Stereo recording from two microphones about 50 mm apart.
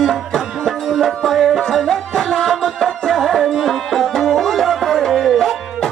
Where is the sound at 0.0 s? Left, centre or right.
Centre.